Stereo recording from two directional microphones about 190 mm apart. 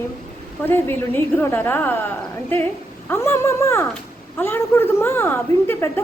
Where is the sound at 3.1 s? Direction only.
15° left (ahead or behind).